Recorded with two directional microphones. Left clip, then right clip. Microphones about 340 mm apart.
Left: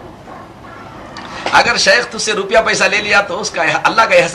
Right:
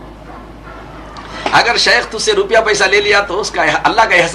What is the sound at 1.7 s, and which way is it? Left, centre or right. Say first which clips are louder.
Speech: even; centre.